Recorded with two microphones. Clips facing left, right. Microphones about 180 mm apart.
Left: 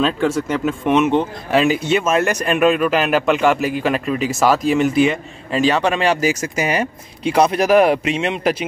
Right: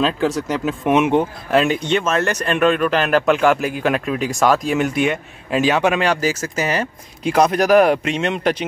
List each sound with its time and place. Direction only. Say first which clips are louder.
0.0 s speech: left 1 dB; centre (ahead or behind)
1.5 s speech: left 1 dB; 5° left (ahead or behind)
6.0 s speech: left 2 dB; 10° left (ahead or behind)